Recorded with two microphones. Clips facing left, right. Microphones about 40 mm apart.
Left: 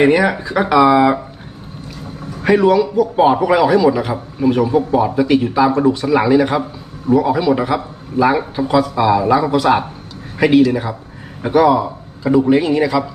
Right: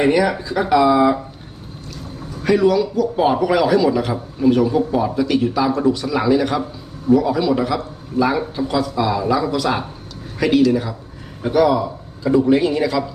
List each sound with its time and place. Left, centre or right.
0.0 s a man's voice: left
2.4 s a man's voice: left